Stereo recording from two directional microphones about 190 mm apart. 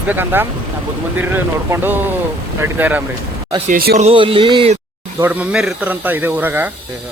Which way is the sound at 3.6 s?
50° right (ahead or behind).